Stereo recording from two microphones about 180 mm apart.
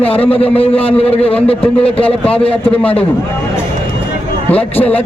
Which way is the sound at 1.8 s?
5° left (ahead or behind).